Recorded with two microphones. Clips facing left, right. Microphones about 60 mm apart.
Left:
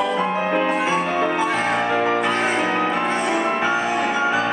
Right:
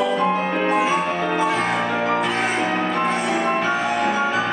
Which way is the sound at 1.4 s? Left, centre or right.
Centre.